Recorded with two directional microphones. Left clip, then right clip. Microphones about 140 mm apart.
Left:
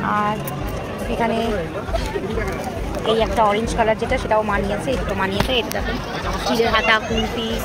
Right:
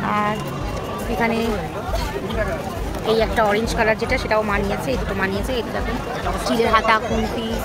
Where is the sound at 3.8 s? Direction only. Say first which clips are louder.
Even; 5° right (ahead or behind).